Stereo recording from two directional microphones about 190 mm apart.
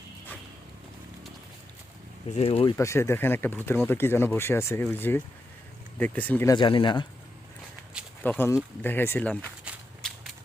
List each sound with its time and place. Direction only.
2.3 s speech: 30° left (ahead or behind)
2.7 s speech: 15° left (ahead or behind)
6.5 s speech: 25° left (ahead or behind)
8.2 s speech: 10° left (ahead or behind)
9.7 s walk: 5° right (ahead or behind)